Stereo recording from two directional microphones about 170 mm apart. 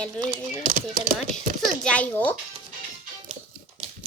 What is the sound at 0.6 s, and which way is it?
Speech, 50° right (ahead or behind).